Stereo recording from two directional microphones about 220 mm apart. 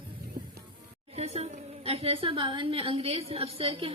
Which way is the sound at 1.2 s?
30° right (ahead or behind).